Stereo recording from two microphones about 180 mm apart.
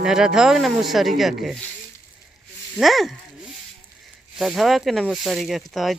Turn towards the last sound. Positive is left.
turn(degrees=0)  # may be behind; listen again after turning